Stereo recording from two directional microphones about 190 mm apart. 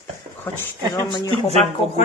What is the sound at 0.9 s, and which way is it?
Speech, 20° left (ahead or behind).